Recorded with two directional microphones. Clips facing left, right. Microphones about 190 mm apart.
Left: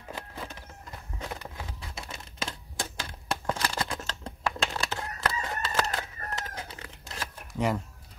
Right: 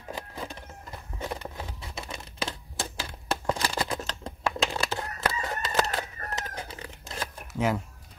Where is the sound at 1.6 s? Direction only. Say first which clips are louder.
Right 2 dB; 25° right (ahead or behind).